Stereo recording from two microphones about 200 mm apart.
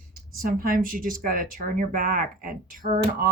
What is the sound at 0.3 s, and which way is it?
Speech, 45° right (ahead or behind).